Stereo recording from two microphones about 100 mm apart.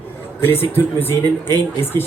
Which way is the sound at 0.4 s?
20° left (ahead or behind).